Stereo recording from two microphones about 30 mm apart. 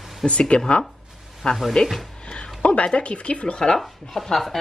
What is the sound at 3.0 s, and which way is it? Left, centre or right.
Speech, left.